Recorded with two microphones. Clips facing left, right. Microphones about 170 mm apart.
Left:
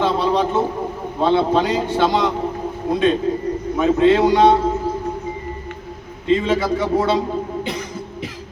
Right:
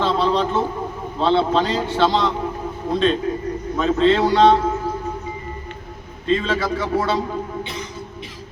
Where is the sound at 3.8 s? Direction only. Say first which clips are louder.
Left 2 dB; 15° left (ahead or behind).